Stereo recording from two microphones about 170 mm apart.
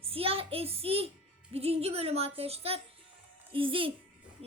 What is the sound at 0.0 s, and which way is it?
Music, 35° right (ahead or behind).